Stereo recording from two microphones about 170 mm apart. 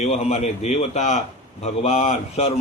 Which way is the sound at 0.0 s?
40° left (ahead or behind).